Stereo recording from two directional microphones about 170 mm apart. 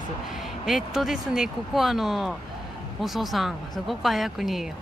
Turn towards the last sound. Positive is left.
turn(degrees=0)  # may be behind; listen again after turning